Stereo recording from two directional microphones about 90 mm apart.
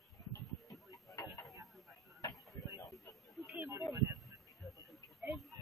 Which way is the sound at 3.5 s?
35° right (ahead or behind).